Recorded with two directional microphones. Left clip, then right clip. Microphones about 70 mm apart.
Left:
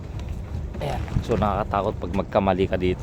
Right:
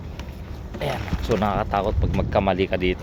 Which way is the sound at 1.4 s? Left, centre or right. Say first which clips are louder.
Even; left.